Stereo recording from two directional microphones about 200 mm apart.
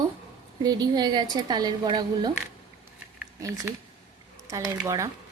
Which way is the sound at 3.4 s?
15° right (ahead or behind).